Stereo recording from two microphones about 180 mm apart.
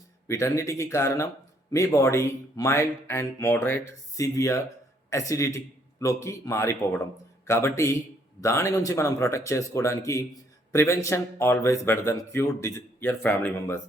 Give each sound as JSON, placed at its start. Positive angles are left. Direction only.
{"t": 0.3, "sound": "a man's voice", "side_deg": 15}